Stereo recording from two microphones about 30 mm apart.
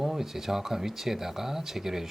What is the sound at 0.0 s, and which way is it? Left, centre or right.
Speech, centre.